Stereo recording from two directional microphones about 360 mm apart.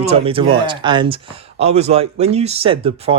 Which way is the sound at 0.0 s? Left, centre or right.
Centre.